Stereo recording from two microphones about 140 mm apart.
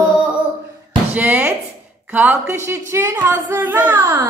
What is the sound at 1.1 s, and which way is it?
Speech, 10° right (ahead or behind).